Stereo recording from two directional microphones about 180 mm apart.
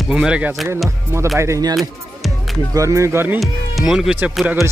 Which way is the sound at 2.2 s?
Centre (ahead or behind).